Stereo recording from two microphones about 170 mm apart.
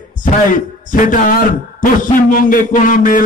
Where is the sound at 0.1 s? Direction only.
50° left (ahead or behind).